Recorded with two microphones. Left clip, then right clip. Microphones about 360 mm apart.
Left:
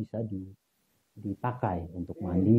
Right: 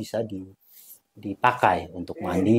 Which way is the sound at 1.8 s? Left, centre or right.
Centre.